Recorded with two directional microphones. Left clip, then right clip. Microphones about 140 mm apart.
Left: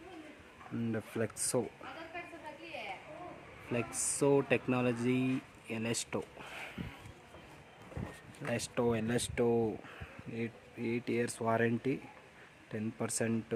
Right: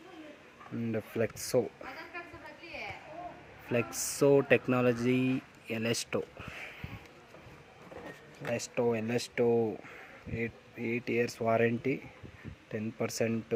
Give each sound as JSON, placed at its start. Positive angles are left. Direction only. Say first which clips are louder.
{"t": 0.9, "sound": "speech", "louder": "right 6 dB", "side_deg": -10}
{"t": 3.7, "sound": "speech", "louder": "right 5 dB", "side_deg": -20}
{"t": 6.4, "sound": "a sound", "louder": "right 1 dB", "side_deg": 15}
{"t": 8.4, "sound": "speech", "louder": "right 3 dB", "side_deg": 10}